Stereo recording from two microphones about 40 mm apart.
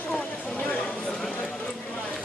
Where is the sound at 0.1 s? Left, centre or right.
Left.